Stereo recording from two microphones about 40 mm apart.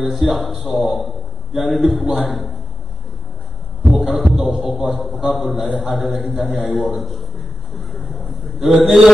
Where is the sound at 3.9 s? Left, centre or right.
Centre.